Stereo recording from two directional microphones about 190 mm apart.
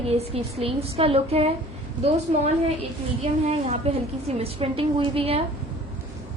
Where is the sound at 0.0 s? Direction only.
30° right (ahead or behind).